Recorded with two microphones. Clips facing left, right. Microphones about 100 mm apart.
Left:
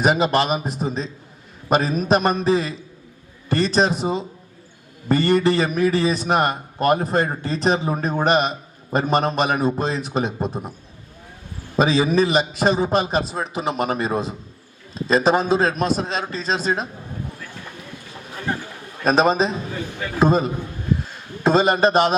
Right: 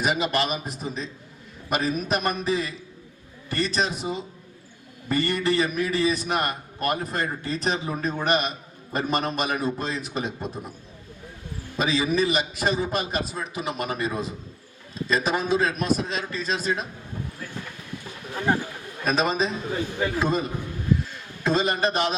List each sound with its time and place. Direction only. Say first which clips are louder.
0.0 s a man's voice: left 6 dB; 35° left (ahead or behind)
11.8 s a man's voice: left 6 dB; 35° left (ahead or behind)
19.0 s a man's voice: left 6 dB; 35° left (ahead or behind)